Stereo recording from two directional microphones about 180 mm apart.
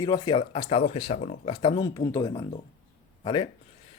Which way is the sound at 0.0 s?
20° left (ahead or behind).